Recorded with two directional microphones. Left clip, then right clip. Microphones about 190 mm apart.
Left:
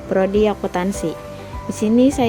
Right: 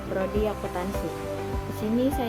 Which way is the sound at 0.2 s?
45° left (ahead or behind).